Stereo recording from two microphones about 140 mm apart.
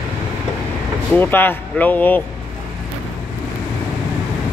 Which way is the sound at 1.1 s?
15° left (ahead or behind).